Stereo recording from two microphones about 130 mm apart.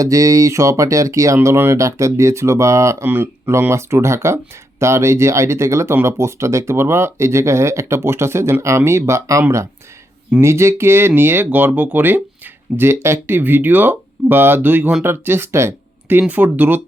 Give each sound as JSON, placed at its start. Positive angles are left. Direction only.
{"t": 0.0, "sound": "speech", "side_deg": -25}